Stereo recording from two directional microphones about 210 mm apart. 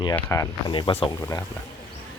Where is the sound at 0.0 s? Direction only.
15° left (ahead or behind).